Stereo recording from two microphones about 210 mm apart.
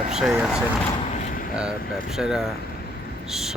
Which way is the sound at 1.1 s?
35° left (ahead or behind).